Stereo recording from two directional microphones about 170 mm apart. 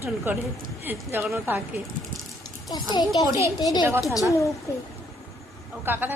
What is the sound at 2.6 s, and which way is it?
A child's voice, 25° left (ahead or behind).